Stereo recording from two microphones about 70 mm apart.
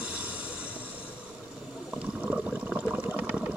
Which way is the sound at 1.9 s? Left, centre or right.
Centre.